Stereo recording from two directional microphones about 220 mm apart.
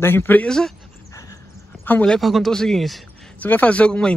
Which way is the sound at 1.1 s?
15° left (ahead or behind).